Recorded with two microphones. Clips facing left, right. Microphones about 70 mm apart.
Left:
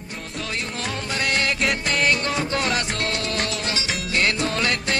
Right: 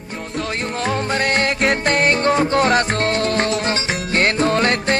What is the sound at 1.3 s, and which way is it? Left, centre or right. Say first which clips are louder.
Music: right 3 dB; right.